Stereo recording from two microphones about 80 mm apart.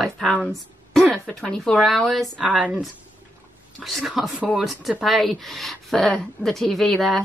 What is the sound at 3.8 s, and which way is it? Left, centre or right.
Speech, centre.